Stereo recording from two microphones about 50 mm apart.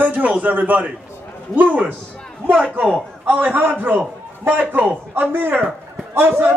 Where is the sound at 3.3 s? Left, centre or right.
Right.